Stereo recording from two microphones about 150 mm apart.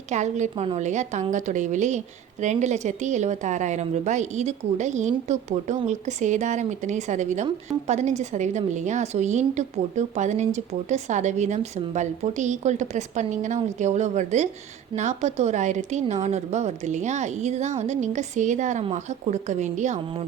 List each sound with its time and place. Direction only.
0.1 s a woman's voice: 50° right (ahead or behind)